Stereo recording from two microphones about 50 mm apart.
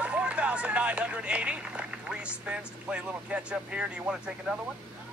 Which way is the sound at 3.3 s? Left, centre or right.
Centre.